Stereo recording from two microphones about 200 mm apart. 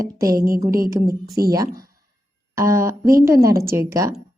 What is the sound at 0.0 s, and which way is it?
A woman's voice, 15° right (ahead or behind).